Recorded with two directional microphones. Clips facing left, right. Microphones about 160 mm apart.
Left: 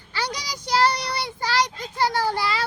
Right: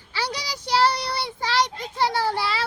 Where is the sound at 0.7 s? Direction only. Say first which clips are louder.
Even; 5° right (ahead or behind).